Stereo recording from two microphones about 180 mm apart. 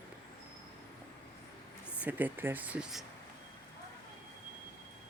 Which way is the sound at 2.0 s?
10° right (ahead or behind).